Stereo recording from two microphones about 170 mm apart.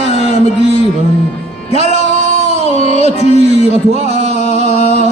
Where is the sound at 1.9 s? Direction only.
40° right (ahead or behind).